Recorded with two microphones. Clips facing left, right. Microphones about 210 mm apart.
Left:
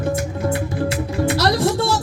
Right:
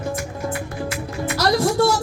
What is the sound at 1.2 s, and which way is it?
Music, 30° left (ahead or behind).